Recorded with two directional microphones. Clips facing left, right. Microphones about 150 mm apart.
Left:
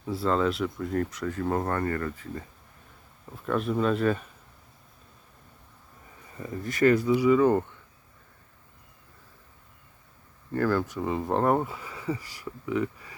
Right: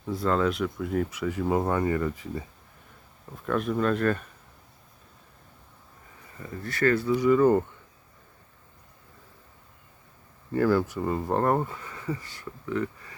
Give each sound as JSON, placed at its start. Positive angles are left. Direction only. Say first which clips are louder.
{"t": 0.0, "sound": "speech", "louder": "even", "side_deg": 5}
{"t": 3.4, "sound": "speech", "louder": "even", "side_deg": 0}
{"t": 6.4, "sound": "speech", "louder": "left 3 dB", "side_deg": 20}
{"t": 7.1, "sound": "speech", "louder": "even", "side_deg": 5}
{"t": 10.5, "sound": "speech", "louder": "right 3 dB", "side_deg": -10}